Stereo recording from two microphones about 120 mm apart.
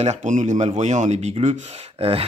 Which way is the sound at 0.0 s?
80° right.